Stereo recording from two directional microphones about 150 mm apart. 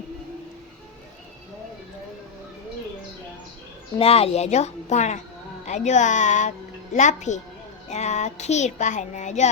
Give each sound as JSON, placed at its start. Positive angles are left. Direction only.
{"t": 3.9, "sound": "a child's voice", "side_deg": 40}